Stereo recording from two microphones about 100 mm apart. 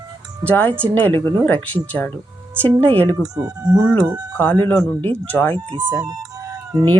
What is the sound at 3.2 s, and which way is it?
Speech, 35° right (ahead or behind).